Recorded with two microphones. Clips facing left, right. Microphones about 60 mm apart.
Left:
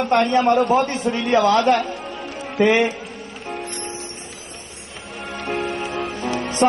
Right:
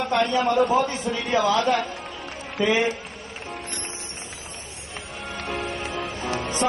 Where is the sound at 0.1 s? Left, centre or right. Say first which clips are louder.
Left 5 dB; left.